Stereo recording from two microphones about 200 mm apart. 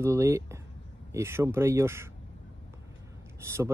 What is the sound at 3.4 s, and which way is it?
Speech, 15° right (ahead or behind).